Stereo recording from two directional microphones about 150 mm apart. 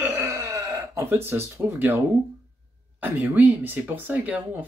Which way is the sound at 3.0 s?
10° right (ahead or behind).